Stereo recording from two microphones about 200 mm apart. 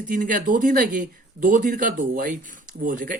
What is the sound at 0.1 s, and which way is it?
Speech, 40° right (ahead or behind).